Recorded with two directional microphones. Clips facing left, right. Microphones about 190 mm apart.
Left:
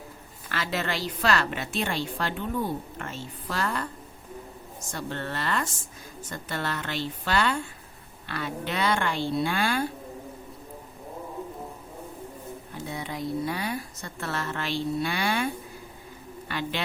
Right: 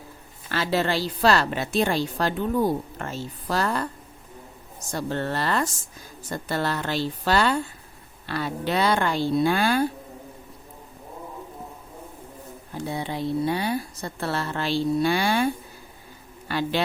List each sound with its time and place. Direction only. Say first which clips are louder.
0.4 s a woman's voice: right 6 dB; 30° right (ahead or behind)
4.9 s a woman's voice: right 6 dB; 35° right (ahead or behind)
12.9 s a woman's voice: right 4 dB; 30° right (ahead or behind)
16.5 s a woman's voice: right 6 dB; 35° right (ahead or behind)